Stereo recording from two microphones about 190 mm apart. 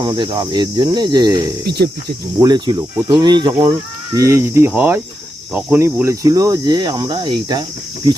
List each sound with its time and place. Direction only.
0.0 s speech: 20° right (ahead or behind)
1.6 s speech: 60° right (ahead or behind)
2.4 s speech: 20° right (ahead or behind)